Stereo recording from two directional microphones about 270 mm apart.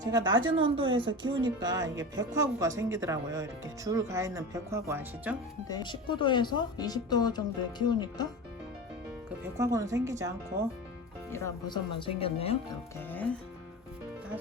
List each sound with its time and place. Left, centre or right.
0.0 s speech: centre
5.6 s speech: centre
9.6 s speech: centre
11.3 s speech: centre
13.0 s speech: centre